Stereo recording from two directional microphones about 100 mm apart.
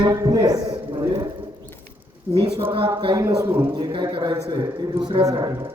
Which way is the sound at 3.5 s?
25° right (ahead or behind).